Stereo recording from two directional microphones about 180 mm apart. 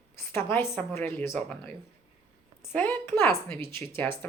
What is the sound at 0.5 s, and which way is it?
Speech, 15° left (ahead or behind).